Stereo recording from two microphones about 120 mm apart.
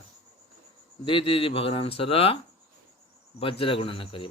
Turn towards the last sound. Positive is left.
turn(degrees=50)  # may be behind; listen again after turning